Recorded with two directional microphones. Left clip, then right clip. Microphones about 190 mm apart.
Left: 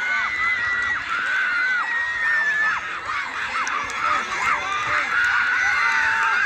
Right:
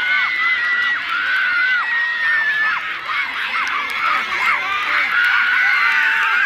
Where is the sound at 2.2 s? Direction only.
25° left (ahead or behind).